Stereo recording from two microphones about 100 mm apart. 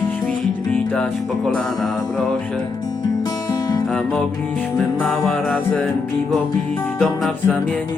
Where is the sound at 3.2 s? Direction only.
40° left (ahead or behind).